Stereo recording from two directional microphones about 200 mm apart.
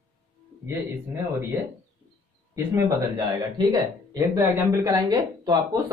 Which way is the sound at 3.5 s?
20° right (ahead or behind).